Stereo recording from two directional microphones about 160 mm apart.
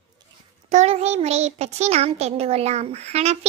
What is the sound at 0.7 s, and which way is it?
Child singing, 40° right (ahead or behind).